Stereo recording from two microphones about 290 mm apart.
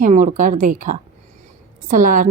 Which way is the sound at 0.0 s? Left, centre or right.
Right.